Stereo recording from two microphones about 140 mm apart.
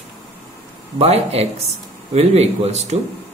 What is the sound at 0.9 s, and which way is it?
A woman's voice, 50° right (ahead or behind).